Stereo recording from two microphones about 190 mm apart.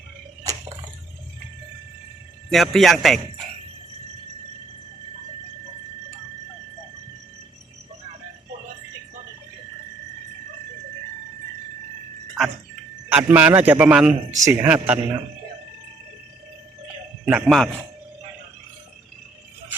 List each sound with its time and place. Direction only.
0.5 s drip: 20° right (ahead or behind)
2.5 s speech: centre (ahead or behind)
13.1 s a man's voice: 10° right (ahead or behind)
17.2 s speech: 5° right (ahead or behind)